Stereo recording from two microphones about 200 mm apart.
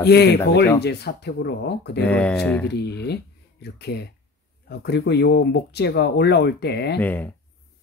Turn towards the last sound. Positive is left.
turn(degrees=10)  # may be behind; listen again after turning